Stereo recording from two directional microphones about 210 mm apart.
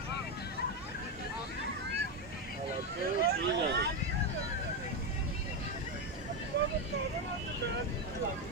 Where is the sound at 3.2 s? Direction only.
50° right (ahead or behind).